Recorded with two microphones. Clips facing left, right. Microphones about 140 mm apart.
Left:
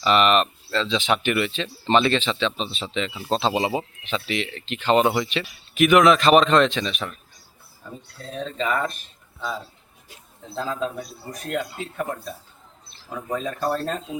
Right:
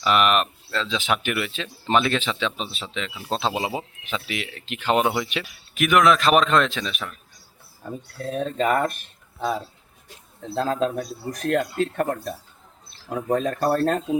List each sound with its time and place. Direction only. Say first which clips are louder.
0.0 s speech: left 2 dB; 5° right (ahead or behind)
8.2 s speech: right 4 dB; 50° right (ahead or behind)
10.5 s speech: right 4 dB; 70° right (ahead or behind)
11.8 s speech: right 6 dB; 65° right (ahead or behind)
13.3 s speech: right 4 dB; 60° right (ahead or behind)